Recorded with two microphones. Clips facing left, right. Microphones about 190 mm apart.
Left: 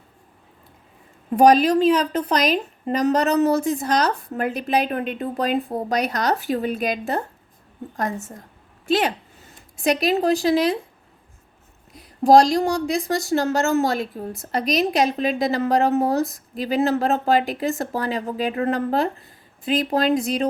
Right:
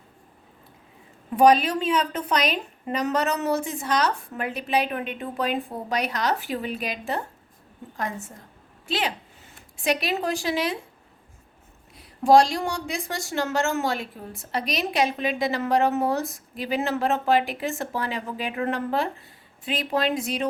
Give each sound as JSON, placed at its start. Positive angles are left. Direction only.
{"t": 1.4, "sound": "a woman's voice", "side_deg": 40}
{"t": 11.9, "sound": "speech", "side_deg": 40}